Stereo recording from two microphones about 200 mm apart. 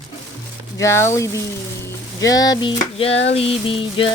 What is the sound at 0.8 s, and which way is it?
Speech, 15° left (ahead or behind).